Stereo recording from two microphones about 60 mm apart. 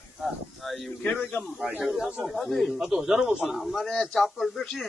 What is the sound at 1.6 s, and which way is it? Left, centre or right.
Speech, centre.